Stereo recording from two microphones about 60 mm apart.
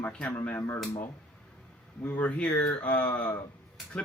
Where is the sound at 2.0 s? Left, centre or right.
Left.